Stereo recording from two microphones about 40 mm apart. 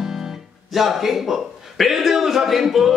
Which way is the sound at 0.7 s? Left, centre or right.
Centre.